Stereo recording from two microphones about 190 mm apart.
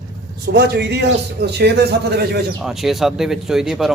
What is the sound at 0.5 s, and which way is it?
A man's voice, 60° right (ahead or behind).